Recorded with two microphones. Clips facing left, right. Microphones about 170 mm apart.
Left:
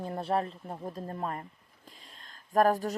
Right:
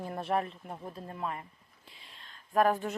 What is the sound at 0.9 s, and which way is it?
Speech, 40° left (ahead or behind).